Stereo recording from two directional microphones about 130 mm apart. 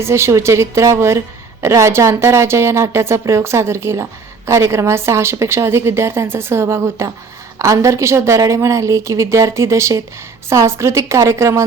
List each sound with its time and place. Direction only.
0.0 s a woman's voice: 20° right (ahead or behind)